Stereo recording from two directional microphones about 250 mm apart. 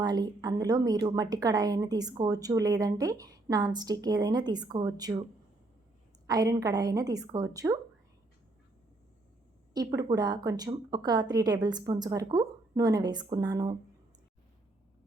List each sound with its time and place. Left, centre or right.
0.0 s a woman's voice: centre
6.2 s a woman's voice: centre
9.7 s a woman's voice: centre